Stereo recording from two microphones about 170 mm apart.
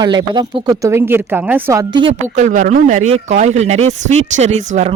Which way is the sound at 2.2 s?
45° right (ahead or behind).